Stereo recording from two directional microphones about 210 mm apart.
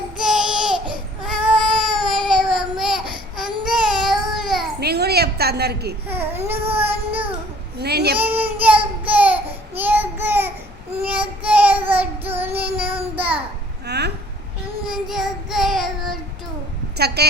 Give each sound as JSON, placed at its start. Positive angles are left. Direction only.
{"t": 0.2, "sound": "a sound", "side_deg": 0}
{"t": 1.9, "sound": "baby cry", "side_deg": 0}
{"t": 4.8, "sound": "a sound", "side_deg": -50}
{"t": 6.1, "sound": "speech", "side_deg": -10}
{"t": 6.7, "sound": "child singing", "side_deg": -10}
{"t": 7.8, "sound": "speech", "side_deg": -50}
{"t": 8.2, "sound": "child singing", "side_deg": -10}
{"t": 13.8, "sound": "a sound", "side_deg": -50}
{"t": 15.0, "sound": "child singing", "side_deg": 0}
{"t": 17.0, "sound": "a woman's voice", "side_deg": -50}